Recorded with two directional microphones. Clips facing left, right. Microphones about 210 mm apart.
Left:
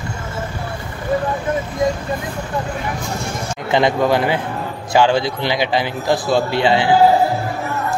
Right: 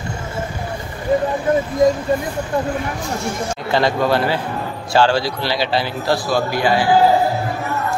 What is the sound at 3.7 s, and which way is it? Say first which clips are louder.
A man's voice: left 2 dB; 20° left (ahead or behind).